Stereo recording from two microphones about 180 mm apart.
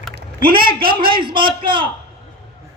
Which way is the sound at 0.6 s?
55° right (ahead or behind).